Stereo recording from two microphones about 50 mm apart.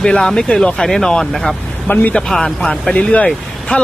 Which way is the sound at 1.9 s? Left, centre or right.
Left.